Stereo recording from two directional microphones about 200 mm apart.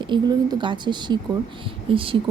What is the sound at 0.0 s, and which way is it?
Speech, 20° right (ahead or behind).